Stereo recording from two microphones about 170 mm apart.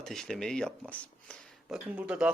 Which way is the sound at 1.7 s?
5° right (ahead or behind).